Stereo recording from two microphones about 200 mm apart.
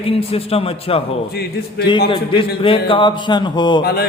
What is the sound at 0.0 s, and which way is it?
A man's voice, 30° left (ahead or behind).